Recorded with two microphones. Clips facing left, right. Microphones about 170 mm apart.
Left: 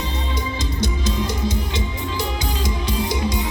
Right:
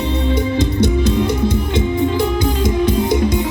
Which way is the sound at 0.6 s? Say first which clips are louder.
Right 8 dB; 60° right (ahead or behind).